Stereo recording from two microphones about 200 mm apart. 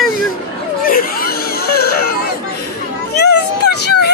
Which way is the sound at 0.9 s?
45° left (ahead or behind).